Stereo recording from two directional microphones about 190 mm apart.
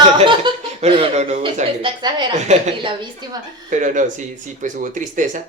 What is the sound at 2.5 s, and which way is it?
Speech, 35° right (ahead or behind).